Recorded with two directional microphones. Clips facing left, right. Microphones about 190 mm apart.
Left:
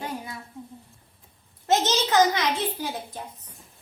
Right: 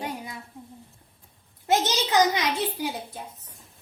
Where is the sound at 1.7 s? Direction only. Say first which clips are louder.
Left 1 dB; 10° right (ahead or behind).